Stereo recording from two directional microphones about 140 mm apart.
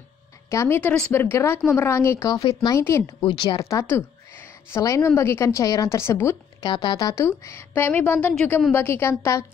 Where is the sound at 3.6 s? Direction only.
20° left (ahead or behind).